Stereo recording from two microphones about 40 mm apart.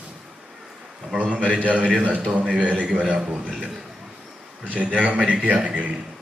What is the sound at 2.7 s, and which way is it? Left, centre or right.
Speech, right.